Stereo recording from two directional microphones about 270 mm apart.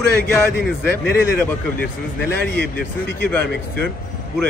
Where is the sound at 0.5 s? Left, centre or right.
Left.